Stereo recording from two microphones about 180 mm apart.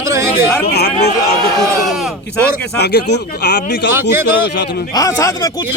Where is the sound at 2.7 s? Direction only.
65° left (ahead or behind).